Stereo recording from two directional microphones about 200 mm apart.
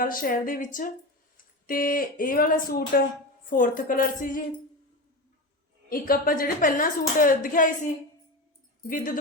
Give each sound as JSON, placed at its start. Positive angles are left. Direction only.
{"t": 0.0, "sound": "speech", "side_deg": 45}
{"t": 5.9, "sound": "speech", "side_deg": 45}